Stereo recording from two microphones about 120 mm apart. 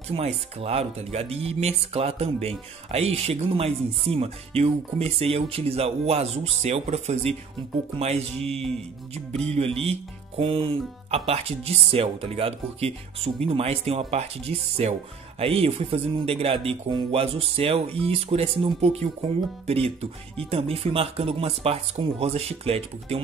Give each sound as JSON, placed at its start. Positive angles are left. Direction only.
{"t": 0.1, "sound": "music", "side_deg": -55}